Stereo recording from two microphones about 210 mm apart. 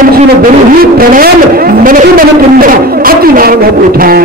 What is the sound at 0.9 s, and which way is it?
A man's voice, 45° right (ahead or behind).